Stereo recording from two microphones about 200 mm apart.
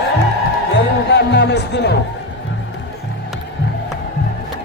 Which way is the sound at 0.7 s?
55° left (ahead or behind).